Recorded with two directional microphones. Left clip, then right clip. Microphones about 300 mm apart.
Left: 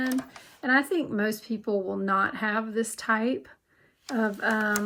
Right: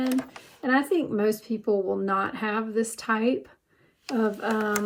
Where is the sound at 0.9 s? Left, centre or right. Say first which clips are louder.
Right 3 dB; left.